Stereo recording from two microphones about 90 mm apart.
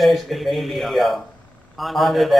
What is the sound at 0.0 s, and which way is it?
Speech, centre (ahead or behind).